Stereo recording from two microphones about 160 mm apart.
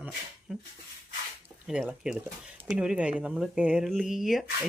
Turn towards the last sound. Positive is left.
turn(degrees=0)  # may be behind; listen again after turning